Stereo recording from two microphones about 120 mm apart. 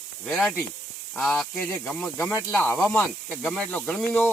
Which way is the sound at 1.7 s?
15° left (ahead or behind).